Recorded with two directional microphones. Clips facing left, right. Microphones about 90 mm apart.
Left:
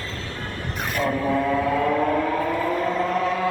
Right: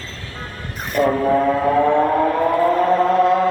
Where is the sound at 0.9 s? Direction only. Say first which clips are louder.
Right 7 dB; 45° right (ahead or behind).